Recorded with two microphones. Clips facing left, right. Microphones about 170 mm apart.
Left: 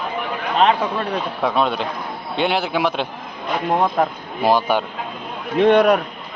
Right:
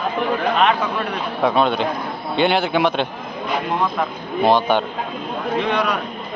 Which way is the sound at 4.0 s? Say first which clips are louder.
Left 4 dB; 40° left (ahead or behind).